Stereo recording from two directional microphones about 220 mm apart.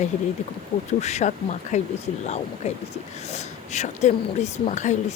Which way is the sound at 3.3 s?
30° left (ahead or behind).